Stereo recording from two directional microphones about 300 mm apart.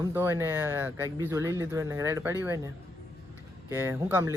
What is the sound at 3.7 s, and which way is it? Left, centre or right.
Speech, centre.